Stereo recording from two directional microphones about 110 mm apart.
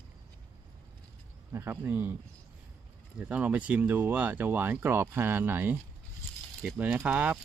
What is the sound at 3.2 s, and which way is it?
Speech, 10° right (ahead or behind).